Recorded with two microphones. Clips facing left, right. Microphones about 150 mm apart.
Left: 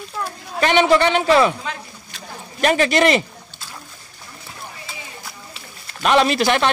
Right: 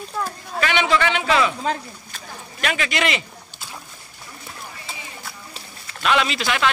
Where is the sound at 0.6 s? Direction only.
40° left (ahead or behind).